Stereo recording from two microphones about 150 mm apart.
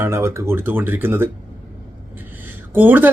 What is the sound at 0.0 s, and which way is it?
Speech, 15° right (ahead or behind).